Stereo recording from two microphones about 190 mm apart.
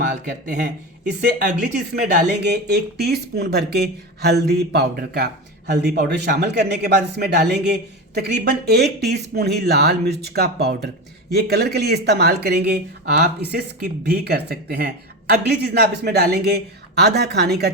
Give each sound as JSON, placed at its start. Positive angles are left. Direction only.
{"t": 0.1, "sound": "speech", "side_deg": -40}
{"t": 2.0, "sound": "speech", "side_deg": -60}